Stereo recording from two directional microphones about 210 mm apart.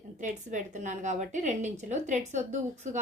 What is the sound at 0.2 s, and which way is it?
A woman's voice, 35° right (ahead or behind).